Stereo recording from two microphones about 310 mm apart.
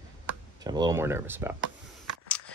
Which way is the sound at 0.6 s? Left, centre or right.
Centre.